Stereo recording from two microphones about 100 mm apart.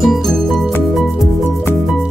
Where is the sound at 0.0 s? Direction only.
Centre (ahead or behind).